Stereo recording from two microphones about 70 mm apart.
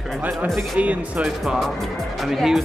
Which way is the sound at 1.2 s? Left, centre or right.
Centre.